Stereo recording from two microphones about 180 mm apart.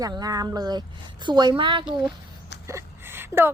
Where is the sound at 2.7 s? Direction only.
15° right (ahead or behind).